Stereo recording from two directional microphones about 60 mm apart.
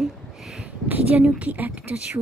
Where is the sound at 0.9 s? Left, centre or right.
Right.